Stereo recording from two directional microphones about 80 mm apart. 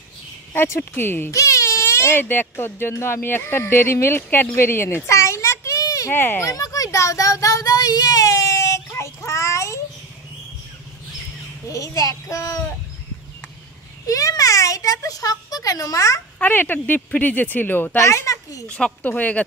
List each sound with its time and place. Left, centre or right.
0.6 s speech: left
1.3 s speech: left
4.6 s children playing: left
6.1 s speech: left
6.4 s child singing: left
11.6 s a child's voice: left
14.0 s a child's voice: left
16.3 s speech: left
17.9 s a child's voice: left
18.7 s a woman's voice: centre